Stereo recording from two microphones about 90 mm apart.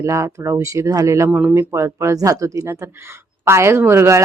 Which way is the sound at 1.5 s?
30° right (ahead or behind).